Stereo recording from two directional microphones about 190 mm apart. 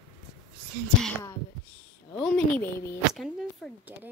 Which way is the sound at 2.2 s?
10° left (ahead or behind).